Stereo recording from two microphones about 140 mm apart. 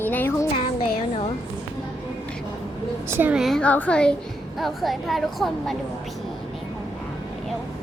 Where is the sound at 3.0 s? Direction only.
15° right (ahead or behind); by 5.8 s centre (ahead or behind).